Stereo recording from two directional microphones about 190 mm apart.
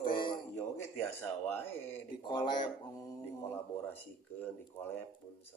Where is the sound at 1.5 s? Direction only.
10° left (ahead or behind).